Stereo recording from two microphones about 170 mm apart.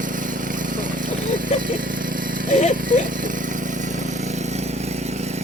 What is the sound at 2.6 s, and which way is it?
Horse, 45° left (ahead or behind).